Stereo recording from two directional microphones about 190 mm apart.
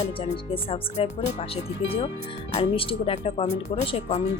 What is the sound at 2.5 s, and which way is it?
Speech, 30° left (ahead or behind).